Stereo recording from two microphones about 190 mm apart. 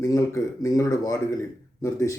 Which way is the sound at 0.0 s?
15° left (ahead or behind).